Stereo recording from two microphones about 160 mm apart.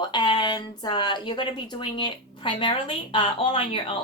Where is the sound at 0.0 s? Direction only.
30° left (ahead or behind).